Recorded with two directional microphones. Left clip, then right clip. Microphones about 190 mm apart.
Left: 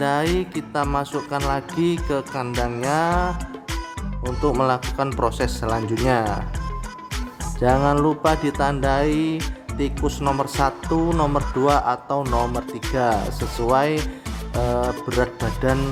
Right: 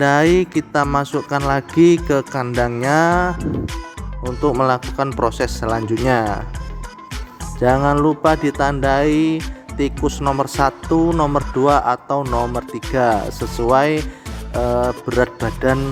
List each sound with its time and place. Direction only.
0.0 s speech: 25° right (ahead or behind)
4.4 s speech: 25° right (ahead or behind)
7.9 s speech: 20° right (ahead or behind)
14.5 s music: 30° right (ahead or behind)
15.2 s speech: 30° right (ahead or behind)